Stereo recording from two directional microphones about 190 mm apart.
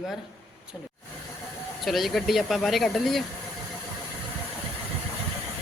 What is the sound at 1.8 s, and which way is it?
A woman's voice, centre (ahead or behind).